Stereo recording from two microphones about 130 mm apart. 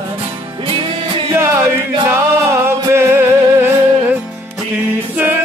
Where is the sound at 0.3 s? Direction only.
40° right (ahead or behind).